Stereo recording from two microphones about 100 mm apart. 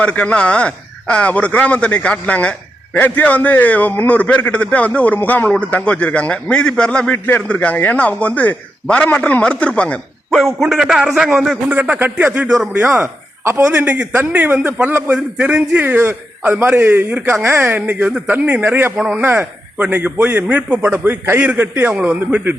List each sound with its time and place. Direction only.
0.0 s speech: 15° left (ahead or behind)
10.3 s a man's voice: centre (ahead or behind)
11.0 s a man's voice: 15° right (ahead or behind)
12.9 s speech: 30° right (ahead or behind)
13.7 s a man's voice: 15° right (ahead or behind)
18.9 s a man's voice: 10° right (ahead or behind)